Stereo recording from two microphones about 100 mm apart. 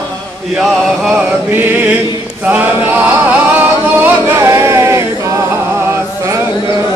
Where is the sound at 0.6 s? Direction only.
5° right (ahead or behind).